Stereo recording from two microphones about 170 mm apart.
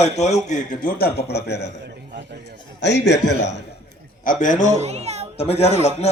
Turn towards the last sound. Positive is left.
turn(degrees=40)  # may be behind; listen again after turning